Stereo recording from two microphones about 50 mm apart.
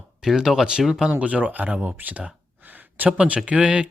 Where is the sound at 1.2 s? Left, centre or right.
Right.